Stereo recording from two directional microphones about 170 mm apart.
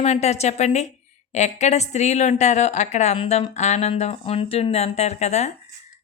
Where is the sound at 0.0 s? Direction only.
40° left (ahead or behind).